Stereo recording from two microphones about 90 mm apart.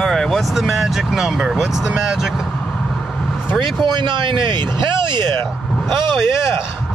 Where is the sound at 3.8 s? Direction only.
60° right (ahead or behind).